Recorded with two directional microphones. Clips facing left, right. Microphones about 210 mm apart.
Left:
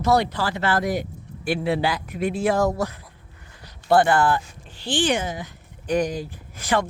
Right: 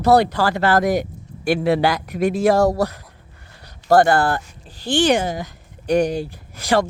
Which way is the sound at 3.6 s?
40° right (ahead or behind).